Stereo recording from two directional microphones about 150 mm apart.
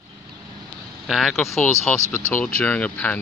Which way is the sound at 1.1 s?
Centre (ahead or behind).